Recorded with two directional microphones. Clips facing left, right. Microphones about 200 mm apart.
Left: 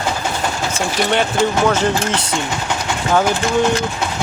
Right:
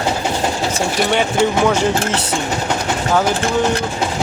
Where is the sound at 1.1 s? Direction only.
15° right (ahead or behind).